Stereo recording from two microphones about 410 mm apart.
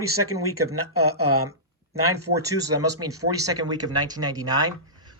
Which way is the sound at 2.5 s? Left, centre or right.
Centre.